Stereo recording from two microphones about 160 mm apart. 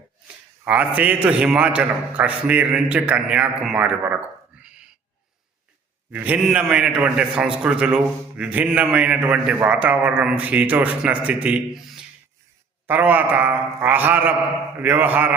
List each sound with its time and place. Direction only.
0.6 s a man's voice: 10° right (ahead or behind)
6.1 s a man's voice: 10° right (ahead or behind)